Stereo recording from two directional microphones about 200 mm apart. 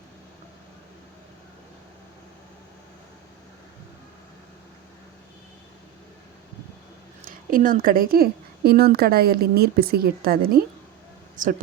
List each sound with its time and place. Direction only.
7.3 s a woman's voice: 45° right (ahead or behind)